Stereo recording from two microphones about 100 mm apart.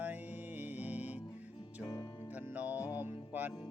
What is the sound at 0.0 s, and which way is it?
Music, 15° right (ahead or behind).